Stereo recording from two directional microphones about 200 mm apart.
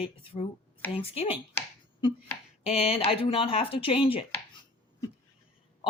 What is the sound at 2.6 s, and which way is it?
Speech, 30° left (ahead or behind).